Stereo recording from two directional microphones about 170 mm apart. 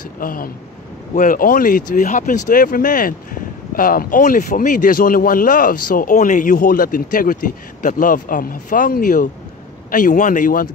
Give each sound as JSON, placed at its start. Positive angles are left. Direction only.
{"t": 0.2, "sound": "speech", "side_deg": 55}